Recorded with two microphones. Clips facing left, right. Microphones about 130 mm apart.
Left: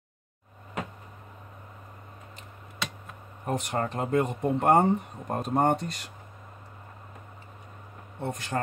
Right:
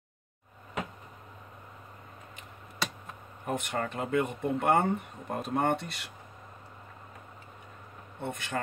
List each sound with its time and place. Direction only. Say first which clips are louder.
3.4 s speech: left 3 dB; 35° left (ahead or behind)
8.2 s speech: left 3 dB; 40° left (ahead or behind)